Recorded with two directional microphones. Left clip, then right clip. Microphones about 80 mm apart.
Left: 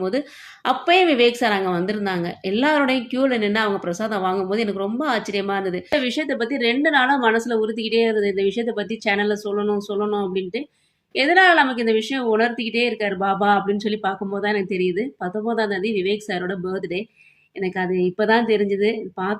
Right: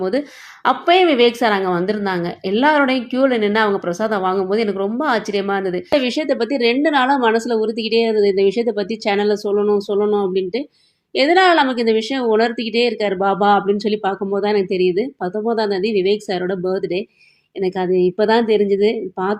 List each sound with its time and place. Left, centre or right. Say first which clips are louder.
0.6 s a woman's voice: right 3 dB; right
5.9 s a woman's voice: right 5 dB; right